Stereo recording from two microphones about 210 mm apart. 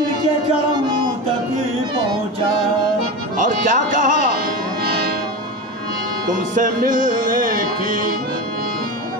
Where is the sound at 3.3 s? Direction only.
40° right (ahead or behind).